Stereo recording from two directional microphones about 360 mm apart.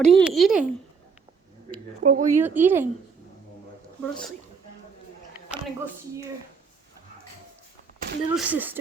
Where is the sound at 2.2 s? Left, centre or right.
Centre.